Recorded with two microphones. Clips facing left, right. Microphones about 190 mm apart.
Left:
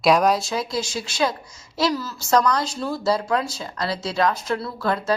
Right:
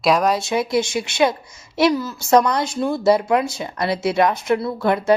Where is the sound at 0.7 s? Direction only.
25° right (ahead or behind).